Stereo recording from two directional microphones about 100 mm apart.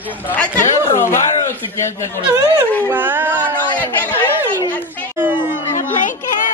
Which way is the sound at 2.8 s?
20° right (ahead or behind).